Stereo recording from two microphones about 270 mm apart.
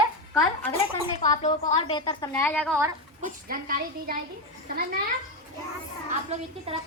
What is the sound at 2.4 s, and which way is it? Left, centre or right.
Speech, centre.